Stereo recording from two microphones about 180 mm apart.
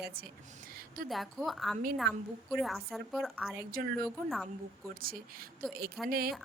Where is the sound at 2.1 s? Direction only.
70° right (ahead or behind).